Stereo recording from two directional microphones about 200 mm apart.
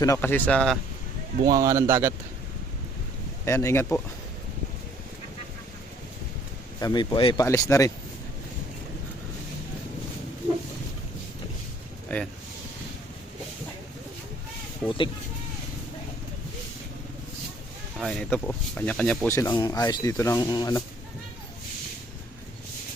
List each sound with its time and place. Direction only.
0.0 s speech: 15° left (ahead or behind)
1.5 s speech: 15° right (ahead or behind)
3.4 s speech: 15° left (ahead or behind)
6.7 s speech: 20° left (ahead or behind)
14.8 s speech: 25° left (ahead or behind)
18.0 s speech: 5° left (ahead or behind); by 20.8 s 20° left (ahead or behind)